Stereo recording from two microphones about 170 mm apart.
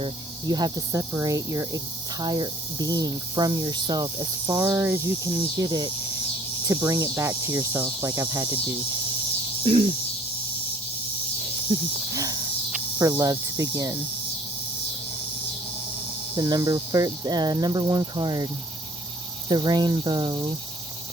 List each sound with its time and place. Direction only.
0.0 s speech: 25° right (ahead or behind)
9.6 s a sound: 35° right (ahead or behind)
11.7 s speech: 25° right (ahead or behind)
12.1 s snake: 20° right (ahead or behind)
13.0 s speech: 20° right (ahead or behind)
16.3 s speech: 25° right (ahead or behind)
19.5 s speech: 25° right (ahead or behind)